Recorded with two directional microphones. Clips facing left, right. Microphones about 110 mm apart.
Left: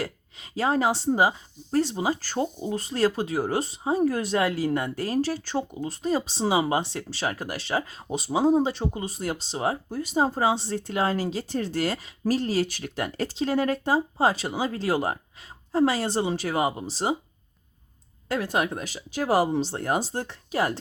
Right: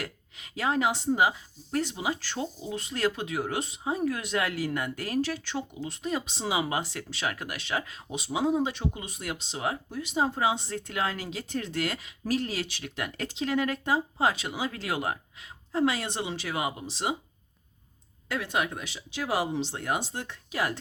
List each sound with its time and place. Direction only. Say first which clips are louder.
0.0 s speech: left 6 dB; 30° left (ahead or behind)
18.3 s speech: left 4 dB; 40° left (ahead or behind)